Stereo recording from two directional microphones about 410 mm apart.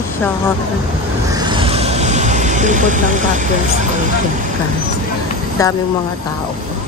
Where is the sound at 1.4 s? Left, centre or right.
Centre.